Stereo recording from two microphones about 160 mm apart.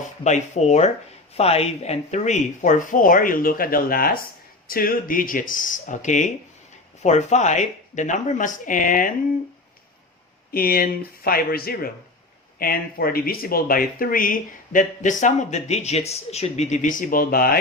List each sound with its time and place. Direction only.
0.3 s speech: 45° left (ahead or behind)
10.5 s speech: 65° left (ahead or behind); by 16.9 s 50° left (ahead or behind)
17.0 s speech: 65° left (ahead or behind)